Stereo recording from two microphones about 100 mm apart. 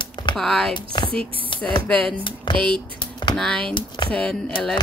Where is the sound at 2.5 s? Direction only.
50° left (ahead or behind).